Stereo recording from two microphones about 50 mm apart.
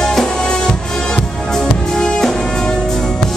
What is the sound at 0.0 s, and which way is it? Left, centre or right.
Music, centre.